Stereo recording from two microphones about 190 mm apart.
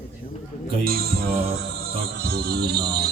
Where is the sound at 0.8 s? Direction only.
55° right (ahead or behind).